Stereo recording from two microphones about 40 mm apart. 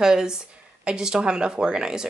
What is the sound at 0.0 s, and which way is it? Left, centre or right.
Speech, centre.